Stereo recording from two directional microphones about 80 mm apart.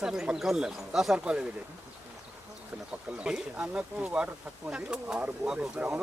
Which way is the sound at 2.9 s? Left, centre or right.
Centre.